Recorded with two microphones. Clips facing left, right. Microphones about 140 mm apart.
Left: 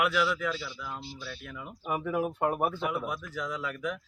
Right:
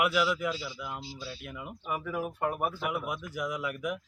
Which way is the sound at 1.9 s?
20° left (ahead or behind).